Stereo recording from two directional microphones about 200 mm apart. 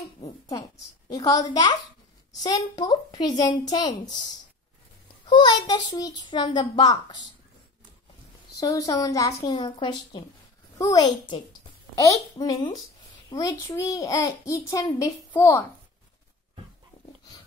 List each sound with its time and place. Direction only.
0.5 s a child's voice: 15° left (ahead or behind)
5.2 s a child's voice: 20° left (ahead or behind)
8.5 s a child's voice: 15° left (ahead or behind)